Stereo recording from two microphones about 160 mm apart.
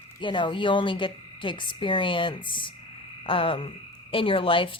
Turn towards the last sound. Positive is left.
turn(degrees=30)  # may be behind; listen again after turning